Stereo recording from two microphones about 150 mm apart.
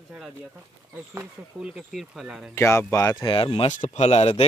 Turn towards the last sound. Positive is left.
turn(degrees=45)  # may be behind; listen again after turning